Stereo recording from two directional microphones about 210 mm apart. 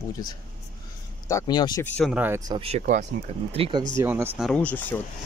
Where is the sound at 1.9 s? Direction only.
5° left (ahead or behind).